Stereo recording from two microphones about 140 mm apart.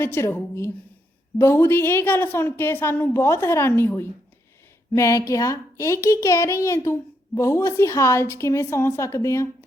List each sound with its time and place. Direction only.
0.0 s a woman's voice: 15° left (ahead or behind)